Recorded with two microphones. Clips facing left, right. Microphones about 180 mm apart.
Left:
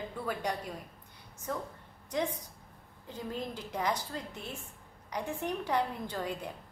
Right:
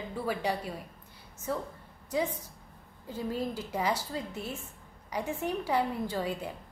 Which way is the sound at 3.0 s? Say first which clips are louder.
Right 5 dB; 5° right (ahead or behind).